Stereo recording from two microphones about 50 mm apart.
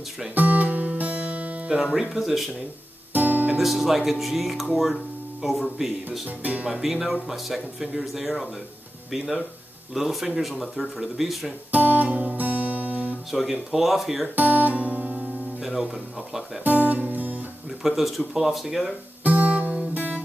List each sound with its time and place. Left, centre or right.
0.3 s music: right
1.8 s speech: centre
3.1 s guitar: right
3.5 s speech: centre
6.2 s speech: right
6.7 s speech: centre
11.7 s speech: right
12.4 s music: right
13.3 s speech: centre
14.3 s guitar: right
15.6 s speech: centre
16.6 s music: right
17.8 s speech: centre
19.2 s guitar: right